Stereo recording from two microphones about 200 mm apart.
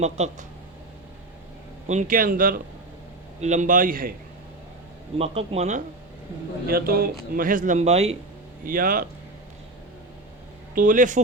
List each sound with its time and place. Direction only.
0.0 s speech: 35° right (ahead or behind)
1.9 s a man's voice: 40° right (ahead or behind)
5.1 s a man's voice: 30° right (ahead or behind)
6.7 s a man's voice: 50° right (ahead or behind); by 8.1 s 30° right (ahead or behind)
8.6 s a man's voice: 45° right (ahead or behind)
10.8 s speech: 40° right (ahead or behind)